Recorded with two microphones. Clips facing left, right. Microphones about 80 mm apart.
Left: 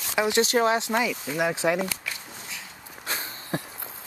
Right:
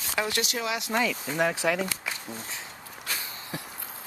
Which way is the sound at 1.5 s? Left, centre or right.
Left.